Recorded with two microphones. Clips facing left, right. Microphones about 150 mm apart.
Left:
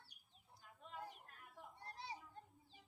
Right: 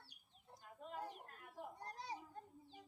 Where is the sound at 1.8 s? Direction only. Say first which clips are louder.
Left 1 dB; 45° right (ahead or behind).